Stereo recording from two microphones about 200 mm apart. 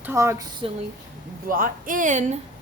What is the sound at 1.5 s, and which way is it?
Speech, 45° right (ahead or behind).